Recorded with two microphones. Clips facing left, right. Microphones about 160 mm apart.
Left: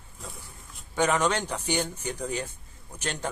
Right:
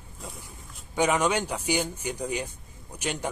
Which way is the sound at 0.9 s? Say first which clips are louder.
Right 1 dB; 10° right (ahead or behind).